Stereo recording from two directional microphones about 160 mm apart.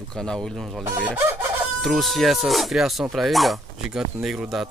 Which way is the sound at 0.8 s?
15° right (ahead or behind).